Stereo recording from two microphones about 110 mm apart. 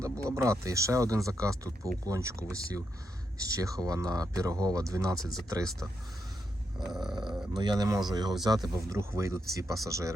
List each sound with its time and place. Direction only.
0.0 s speech: 25° right (ahead or behind)
6.7 s a sound: 5° right (ahead or behind)
7.5 s speech: 40° right (ahead or behind)
9.0 s speech: 25° right (ahead or behind)